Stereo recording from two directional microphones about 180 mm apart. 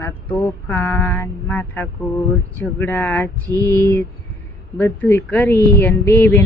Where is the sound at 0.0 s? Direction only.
10° left (ahead or behind).